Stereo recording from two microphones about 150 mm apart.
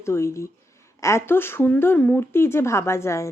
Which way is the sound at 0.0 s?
20° left (ahead or behind).